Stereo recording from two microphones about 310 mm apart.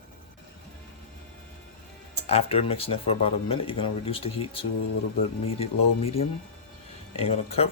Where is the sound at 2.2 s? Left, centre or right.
Centre.